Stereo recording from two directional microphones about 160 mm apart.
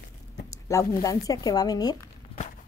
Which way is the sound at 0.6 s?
20° left (ahead or behind).